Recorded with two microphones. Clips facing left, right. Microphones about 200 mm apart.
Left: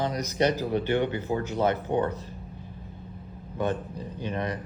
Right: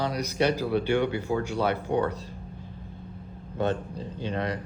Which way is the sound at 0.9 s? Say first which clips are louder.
Right 1 dB; 10° right (ahead or behind).